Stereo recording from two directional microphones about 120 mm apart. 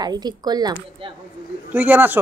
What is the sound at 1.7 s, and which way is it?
Speech, 15° right (ahead or behind).